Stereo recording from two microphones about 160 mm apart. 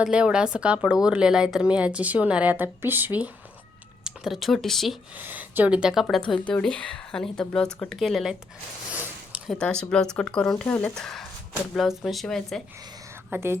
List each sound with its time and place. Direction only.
0.0 s a woman's voice: 5° right (ahead or behind)
5.1 s speech: 10° right (ahead or behind)
8.9 s a sound: 10° right (ahead or behind)
9.5 s speech: 5° left (ahead or behind)
13.3 s a woman's voice: 15° right (ahead or behind)